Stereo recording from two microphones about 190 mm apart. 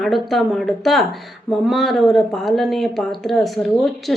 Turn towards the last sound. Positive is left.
turn(degrees=0)  # may be behind; listen again after turning